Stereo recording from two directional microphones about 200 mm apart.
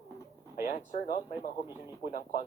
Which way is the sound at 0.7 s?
40° left (ahead or behind).